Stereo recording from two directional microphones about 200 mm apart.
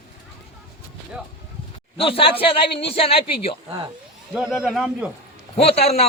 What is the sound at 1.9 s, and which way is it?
Speech, 25° left (ahead or behind).